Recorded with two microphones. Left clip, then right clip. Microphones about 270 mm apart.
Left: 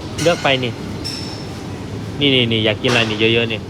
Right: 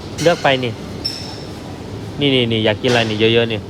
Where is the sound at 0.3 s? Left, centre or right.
Right.